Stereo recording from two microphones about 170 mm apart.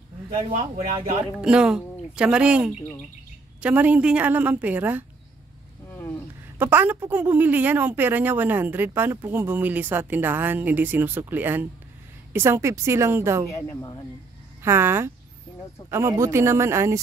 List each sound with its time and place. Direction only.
1.3 s speech: 5° right (ahead or behind)
5.9 s a sound: 10° left (ahead or behind)
6.6 s speech: 10° right (ahead or behind)
13.5 s speech: 20° left (ahead or behind)
14.6 s speech: 15° right (ahead or behind)